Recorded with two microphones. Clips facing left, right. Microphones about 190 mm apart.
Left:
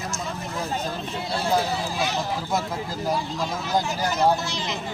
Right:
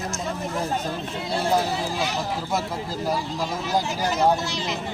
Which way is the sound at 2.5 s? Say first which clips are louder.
Even; 5° right (ahead or behind).